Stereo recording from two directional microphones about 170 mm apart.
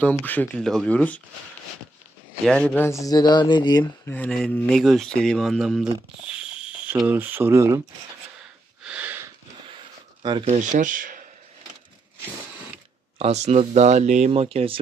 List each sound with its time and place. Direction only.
0.0 s speech: 10° left (ahead or behind)
2.5 s speech: 5° left (ahead or behind)
3.0 s speech: 25° left (ahead or behind)
4.1 s speech: 5° left (ahead or behind)
6.2 s a sound: 5° right (ahead or behind)
7.0 s speech: 10° right (ahead or behind)
8.8 s a sound: 10° right (ahead or behind)
10.5 s speech: 45° right (ahead or behind)
13.1 s speech: 40° right (ahead or behind)